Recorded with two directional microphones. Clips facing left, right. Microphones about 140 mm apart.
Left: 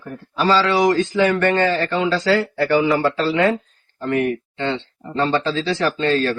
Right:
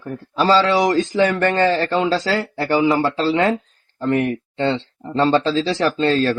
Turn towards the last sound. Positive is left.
turn(degrees=-35)  # may be behind; listen again after turning